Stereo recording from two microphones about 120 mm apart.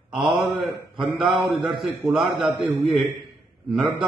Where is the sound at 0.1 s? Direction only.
5° right (ahead or behind).